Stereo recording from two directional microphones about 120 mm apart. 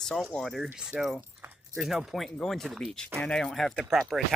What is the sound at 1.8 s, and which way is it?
Speech, centre (ahead or behind).